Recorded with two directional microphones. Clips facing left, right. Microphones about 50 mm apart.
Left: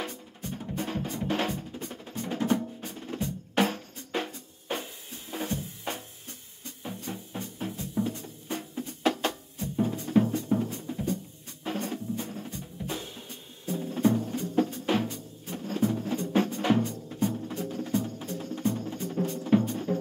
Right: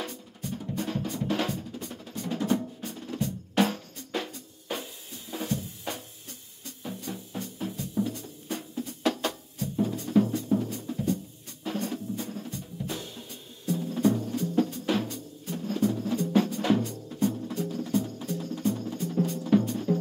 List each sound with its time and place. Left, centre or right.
0.4 s music: left
1.1 s drum: left
5.3 s music: left
11.6 s drum: left
13.7 s music: left
16.3 s drum: left
17.5 s music: left